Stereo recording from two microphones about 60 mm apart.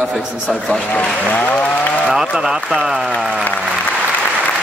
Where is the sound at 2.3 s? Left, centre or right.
Centre.